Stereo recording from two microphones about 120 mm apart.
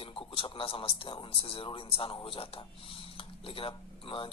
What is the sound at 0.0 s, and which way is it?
A man's voice, 45° left (ahead or behind).